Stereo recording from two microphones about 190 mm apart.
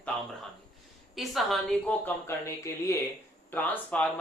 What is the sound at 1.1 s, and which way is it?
A woman's voice, centre (ahead or behind).